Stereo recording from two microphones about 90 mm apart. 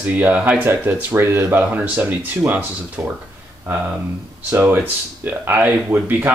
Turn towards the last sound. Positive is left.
turn(degrees=-20)  # may be behind; listen again after turning